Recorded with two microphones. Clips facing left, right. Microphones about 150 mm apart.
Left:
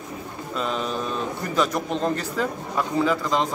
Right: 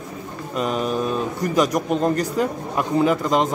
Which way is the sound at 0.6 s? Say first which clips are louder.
Right 5 dB; 10° right (ahead or behind).